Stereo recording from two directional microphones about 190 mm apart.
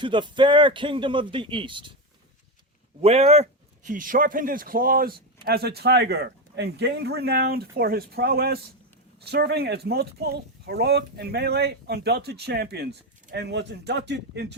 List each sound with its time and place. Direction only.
0.0 s speech: 25° right (ahead or behind)
3.0 s speech: 35° right (ahead or behind); by 14.4 s 65° right (ahead or behind)